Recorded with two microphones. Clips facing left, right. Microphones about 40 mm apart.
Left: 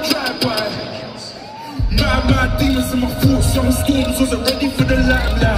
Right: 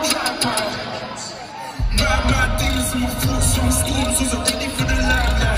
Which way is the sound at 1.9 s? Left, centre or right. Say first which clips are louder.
Left 3 dB; right.